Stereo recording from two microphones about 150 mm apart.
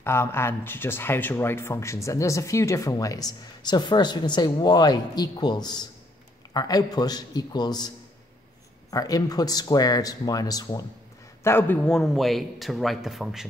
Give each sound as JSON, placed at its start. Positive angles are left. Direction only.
{"t": 0.0, "sound": "speech", "side_deg": 15}
{"t": 8.9, "sound": "speech", "side_deg": 25}
{"t": 11.4, "sound": "a man's voice", "side_deg": 15}